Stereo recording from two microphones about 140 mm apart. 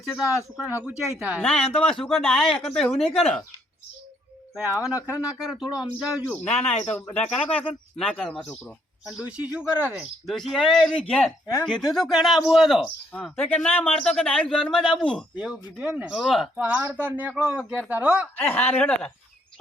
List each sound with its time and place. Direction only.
0.5 s speech: 10° right (ahead or behind)
1.4 s speech: 5° left (ahead or behind)
4.5 s speech: 5° right (ahead or behind)
4.9 s speech: 20° left (ahead or behind)
5.3 s speech: 5° right (ahead or behind)
6.6 s speech: 50° left (ahead or behind)
6.9 s speech: 10° left (ahead or behind)
7.2 s speech: 40° left (ahead or behind)
7.9 s speech: 5° left (ahead or behind)
9.0 s speech: 5° right (ahead or behind)
15.4 s speech: 5° right (ahead or behind)
16.6 s speech: 10° right (ahead or behind)
18.3 s speech: 10° left (ahead or behind)